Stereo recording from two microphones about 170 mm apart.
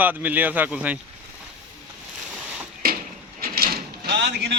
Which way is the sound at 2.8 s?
60° right (ahead or behind).